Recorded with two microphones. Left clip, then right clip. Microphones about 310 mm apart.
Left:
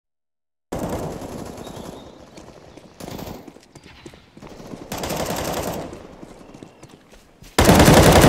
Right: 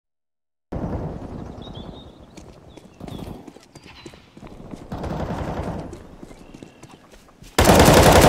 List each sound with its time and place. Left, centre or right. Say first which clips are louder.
0.7 s machine gun: left 4 dB; left
3.2 s a sound: left 3 dB; left
3.4 s clip-clop: even; centre
4.8 s machine gun: left 4 dB; left
6.2 s clip-clop: left 1 dB; centre
7.4 s machine gun: even; centre